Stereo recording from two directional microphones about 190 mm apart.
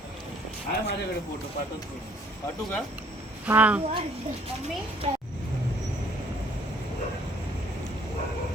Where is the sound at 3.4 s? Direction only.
5° right (ahead or behind).